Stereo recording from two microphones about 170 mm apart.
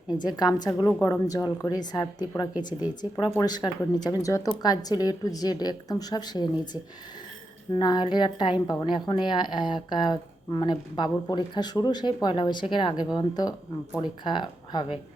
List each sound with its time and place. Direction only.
0.3 s a woman's voice: 25° left (ahead or behind)
7.7 s a woman's voice: 25° left (ahead or behind)